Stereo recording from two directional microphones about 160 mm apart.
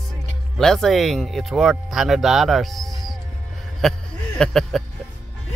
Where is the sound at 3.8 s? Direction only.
5° left (ahead or behind).